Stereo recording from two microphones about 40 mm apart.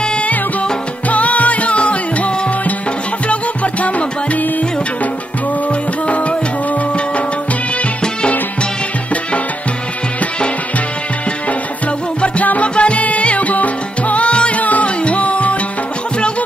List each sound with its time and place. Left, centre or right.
0.0 s music: left
1.0 s music: left
5.7 s music: left
8.0 s music: left
12.6 s music: left